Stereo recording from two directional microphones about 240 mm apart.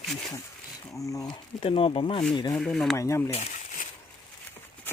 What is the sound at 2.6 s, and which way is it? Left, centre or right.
Speech, centre.